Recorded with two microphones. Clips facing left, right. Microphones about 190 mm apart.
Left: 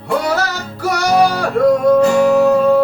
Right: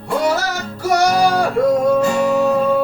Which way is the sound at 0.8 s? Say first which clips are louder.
Left 1 dB; 60° left (ahead or behind).